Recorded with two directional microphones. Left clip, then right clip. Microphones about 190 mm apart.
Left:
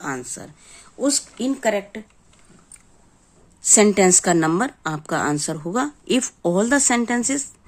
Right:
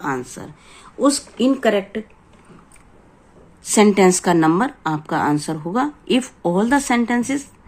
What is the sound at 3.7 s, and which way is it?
A woman's voice, 30° left (ahead or behind).